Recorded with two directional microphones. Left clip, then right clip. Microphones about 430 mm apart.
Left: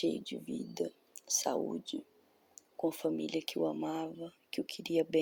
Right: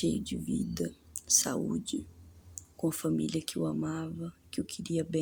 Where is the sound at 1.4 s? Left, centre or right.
Right.